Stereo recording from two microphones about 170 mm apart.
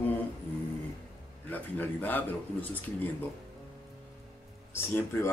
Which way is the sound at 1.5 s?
10° left (ahead or behind).